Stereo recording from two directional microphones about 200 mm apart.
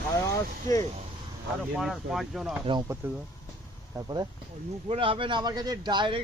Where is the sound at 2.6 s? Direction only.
20° right (ahead or behind).